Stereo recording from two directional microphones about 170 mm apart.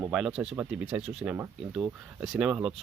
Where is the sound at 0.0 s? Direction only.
5° right (ahead or behind).